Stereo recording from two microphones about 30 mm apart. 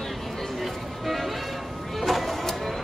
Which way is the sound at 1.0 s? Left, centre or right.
Centre.